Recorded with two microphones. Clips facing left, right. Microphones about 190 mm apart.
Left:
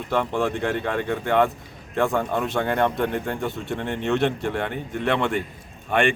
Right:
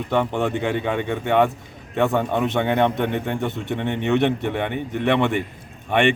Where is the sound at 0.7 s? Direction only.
15° right (ahead or behind).